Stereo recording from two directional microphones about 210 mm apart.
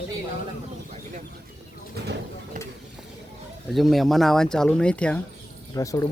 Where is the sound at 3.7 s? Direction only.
Centre (ahead or behind).